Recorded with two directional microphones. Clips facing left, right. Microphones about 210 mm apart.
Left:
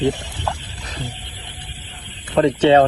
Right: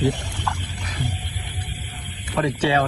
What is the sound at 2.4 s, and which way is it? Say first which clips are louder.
Speech: left 8 dB; 25° left (ahead or behind).